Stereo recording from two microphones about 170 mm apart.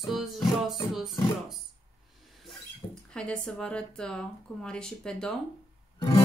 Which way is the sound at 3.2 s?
5° left (ahead or behind).